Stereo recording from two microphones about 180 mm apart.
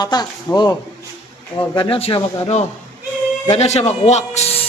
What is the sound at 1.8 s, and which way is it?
A man's voice, 30° left (ahead or behind).